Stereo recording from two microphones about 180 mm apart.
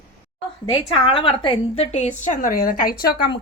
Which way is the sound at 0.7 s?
25° left (ahead or behind).